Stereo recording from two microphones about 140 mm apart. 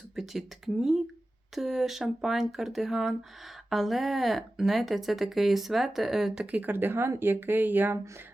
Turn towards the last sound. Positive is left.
turn(degrees=-15)  # may be behind; listen again after turning